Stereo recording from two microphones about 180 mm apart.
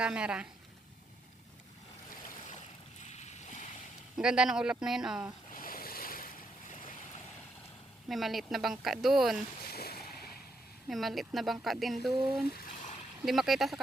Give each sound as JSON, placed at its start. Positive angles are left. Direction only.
{"t": 0.0, "sound": "speech", "side_deg": -5}
{"t": 3.0, "sound": "boat", "side_deg": 40}
{"t": 4.2, "sound": "speech", "side_deg": -5}
{"t": 5.5, "sound": "waves", "side_deg": 50}
{"t": 6.7, "sound": "boat", "side_deg": 45}
{"t": 8.1, "sound": "speech", "side_deg": 0}
{"t": 9.6, "sound": "a sound", "side_deg": 60}
{"t": 10.8, "sound": "speech", "side_deg": 0}
{"t": 12.5, "sound": "a sound", "side_deg": 50}
{"t": 13.2, "sound": "speech", "side_deg": 0}